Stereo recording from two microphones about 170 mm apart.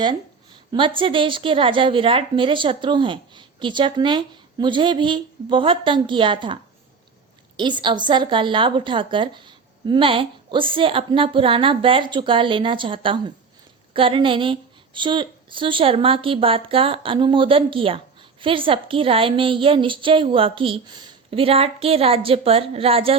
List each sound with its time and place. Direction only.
0.0 s a woman's voice: 25° right (ahead or behind)
7.6 s a woman's voice: 25° right (ahead or behind)